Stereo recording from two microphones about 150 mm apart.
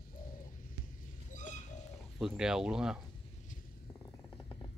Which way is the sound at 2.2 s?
5° right (ahead or behind).